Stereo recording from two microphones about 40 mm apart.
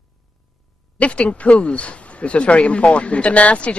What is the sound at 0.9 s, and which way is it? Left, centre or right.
Speech, left.